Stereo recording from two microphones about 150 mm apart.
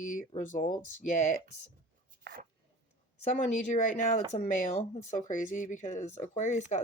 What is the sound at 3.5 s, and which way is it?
Speech, 55° left (ahead or behind).